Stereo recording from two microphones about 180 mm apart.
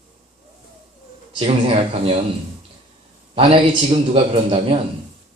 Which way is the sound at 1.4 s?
35° right (ahead or behind).